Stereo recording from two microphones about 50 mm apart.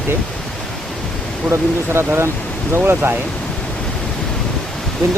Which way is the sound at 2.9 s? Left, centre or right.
Right.